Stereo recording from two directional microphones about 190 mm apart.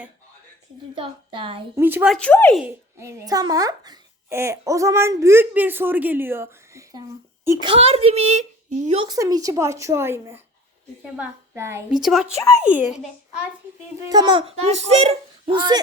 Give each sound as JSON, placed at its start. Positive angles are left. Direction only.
{"t": 0.9, "sound": "speech", "side_deg": -25}
{"t": 1.7, "sound": "a child's voice", "side_deg": -10}
{"t": 2.1, "sound": "speech", "side_deg": 5}
{"t": 3.0, "sound": "a child's voice", "side_deg": -15}
{"t": 7.7, "sound": "a child's voice", "side_deg": -30}
{"t": 9.0, "sound": "a child's voice", "side_deg": -20}
{"t": 12.0, "sound": "speech", "side_deg": 0}
{"t": 12.4, "sound": "a child's voice", "side_deg": 15}
{"t": 12.6, "sound": "a child's voice", "side_deg": -10}
{"t": 14.1, "sound": "speech", "side_deg": -25}